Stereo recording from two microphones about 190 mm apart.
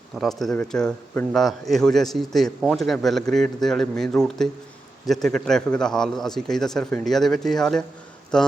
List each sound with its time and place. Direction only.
0.2 s a man's voice: centre (ahead or behind)